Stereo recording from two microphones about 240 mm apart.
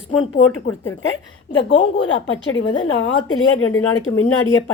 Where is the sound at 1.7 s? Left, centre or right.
Left.